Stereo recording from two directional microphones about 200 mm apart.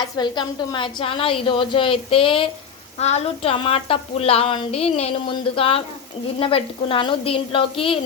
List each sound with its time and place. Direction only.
0.0 s a woman's voice: 20° left (ahead or behind)